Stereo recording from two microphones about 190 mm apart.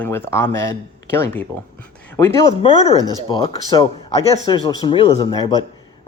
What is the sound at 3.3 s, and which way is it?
Speech, 25° left (ahead or behind).